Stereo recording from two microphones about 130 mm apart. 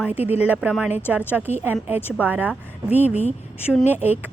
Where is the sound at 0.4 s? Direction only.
15° right (ahead or behind).